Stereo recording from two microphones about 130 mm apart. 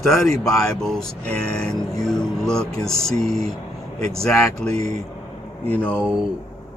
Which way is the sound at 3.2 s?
50° right (ahead or behind).